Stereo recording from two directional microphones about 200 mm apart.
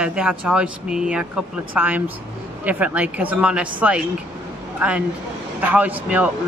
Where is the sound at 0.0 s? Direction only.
5° right (ahead or behind).